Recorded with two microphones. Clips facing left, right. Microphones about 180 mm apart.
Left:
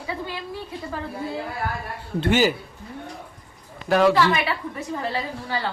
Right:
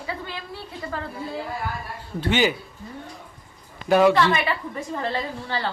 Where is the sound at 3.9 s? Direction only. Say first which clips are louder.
Right 1 dB; centre (ahead or behind).